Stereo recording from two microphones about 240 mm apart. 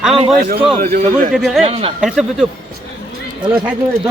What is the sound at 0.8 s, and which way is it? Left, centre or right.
Speech, right.